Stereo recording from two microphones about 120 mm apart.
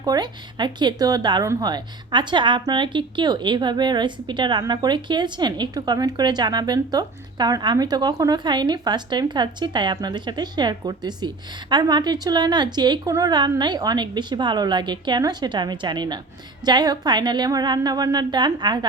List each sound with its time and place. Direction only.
0.0 s speech: 35° right (ahead or behind)